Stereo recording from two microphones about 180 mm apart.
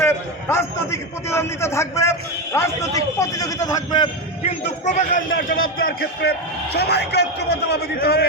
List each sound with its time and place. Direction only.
0.0 s a man's voice: 15° left (ahead or behind)
4.6 s a man's voice: 40° left (ahead or behind)
5.8 s a man's voice: 60° left (ahead or behind)